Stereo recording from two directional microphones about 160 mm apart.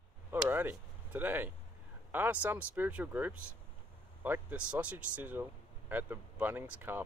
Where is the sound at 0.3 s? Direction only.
15° right (ahead or behind).